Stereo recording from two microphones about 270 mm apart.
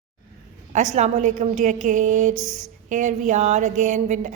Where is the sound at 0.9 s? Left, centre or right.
Right.